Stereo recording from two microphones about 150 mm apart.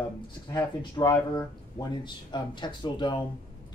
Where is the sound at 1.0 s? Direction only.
25° left (ahead or behind).